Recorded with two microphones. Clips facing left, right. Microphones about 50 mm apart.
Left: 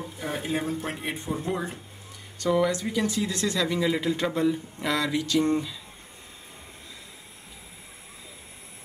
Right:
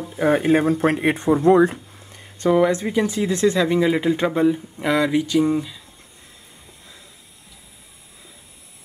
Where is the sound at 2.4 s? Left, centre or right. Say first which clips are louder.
Right 7 dB; right.